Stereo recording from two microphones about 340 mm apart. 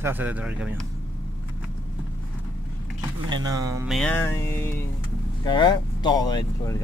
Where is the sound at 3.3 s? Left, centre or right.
Centre.